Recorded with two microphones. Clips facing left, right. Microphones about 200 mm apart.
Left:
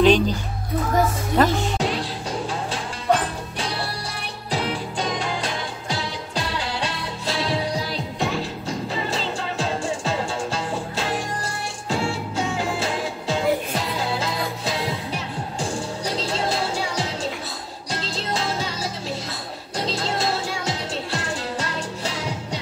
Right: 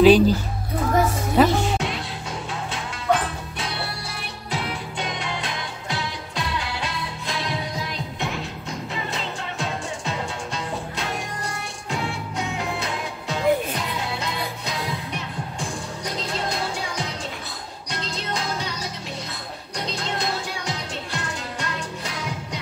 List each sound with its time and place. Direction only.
0.0 s speech: 5° right (ahead or behind)
1.8 s music: 35° left (ahead or behind)
16.0 s music: 30° left (ahead or behind)
19.8 s music: 30° left (ahead or behind)